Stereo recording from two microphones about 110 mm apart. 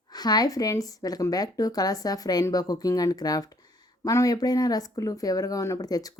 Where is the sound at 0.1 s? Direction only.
40° left (ahead or behind).